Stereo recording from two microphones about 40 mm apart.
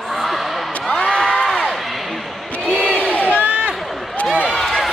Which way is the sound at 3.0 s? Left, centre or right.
Left.